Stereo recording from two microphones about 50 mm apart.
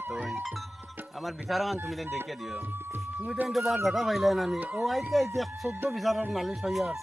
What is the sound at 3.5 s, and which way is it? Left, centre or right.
Speech, centre.